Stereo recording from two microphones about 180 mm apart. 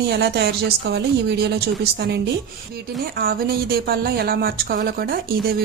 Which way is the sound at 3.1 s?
55° right (ahead or behind).